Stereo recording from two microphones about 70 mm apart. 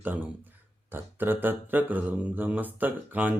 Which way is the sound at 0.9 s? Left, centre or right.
Right.